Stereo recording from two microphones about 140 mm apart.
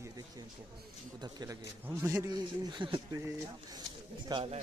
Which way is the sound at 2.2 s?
35° right (ahead or behind).